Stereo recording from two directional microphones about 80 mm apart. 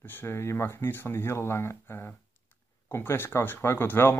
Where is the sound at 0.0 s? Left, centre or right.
Left.